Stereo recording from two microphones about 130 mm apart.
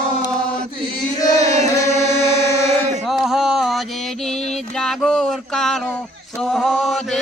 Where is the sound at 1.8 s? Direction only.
20° left (ahead or behind).